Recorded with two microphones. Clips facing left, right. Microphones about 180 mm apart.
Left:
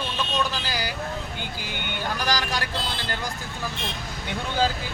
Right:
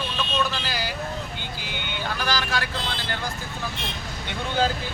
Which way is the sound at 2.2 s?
15° left (ahead or behind).